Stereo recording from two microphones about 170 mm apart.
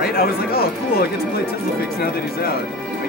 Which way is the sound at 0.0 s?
65° left (ahead or behind).